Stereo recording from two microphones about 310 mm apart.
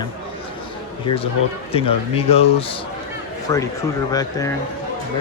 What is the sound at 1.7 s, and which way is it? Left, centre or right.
A man's voice, centre.